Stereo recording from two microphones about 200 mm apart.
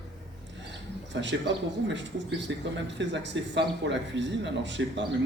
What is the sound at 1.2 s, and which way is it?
A man's voice, 60° right (ahead or behind).